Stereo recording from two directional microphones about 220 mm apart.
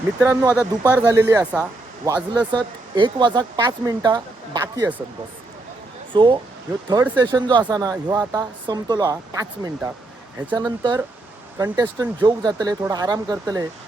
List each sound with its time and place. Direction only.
0.2 s speech: 15° right (ahead or behind)
6.1 s speech: 20° right (ahead or behind)